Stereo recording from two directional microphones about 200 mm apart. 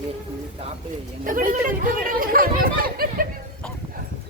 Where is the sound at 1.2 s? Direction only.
40° right (ahead or behind).